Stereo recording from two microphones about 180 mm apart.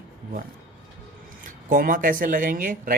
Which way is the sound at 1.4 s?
50° right (ahead or behind).